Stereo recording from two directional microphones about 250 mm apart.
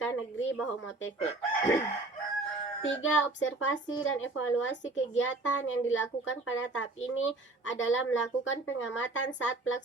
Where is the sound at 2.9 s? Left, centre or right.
Left.